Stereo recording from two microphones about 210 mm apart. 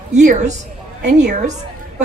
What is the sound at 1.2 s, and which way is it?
Speech, 35° right (ahead or behind).